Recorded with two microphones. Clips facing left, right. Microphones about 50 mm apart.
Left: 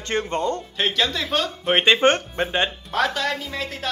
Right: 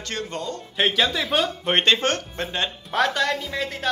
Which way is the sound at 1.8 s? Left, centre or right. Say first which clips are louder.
Left 6 dB; centre.